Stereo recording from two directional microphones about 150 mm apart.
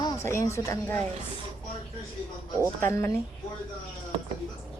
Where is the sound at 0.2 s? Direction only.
20° left (ahead or behind).